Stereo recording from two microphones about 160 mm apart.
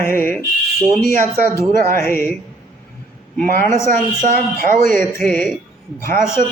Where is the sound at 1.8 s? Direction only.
15° left (ahead or behind).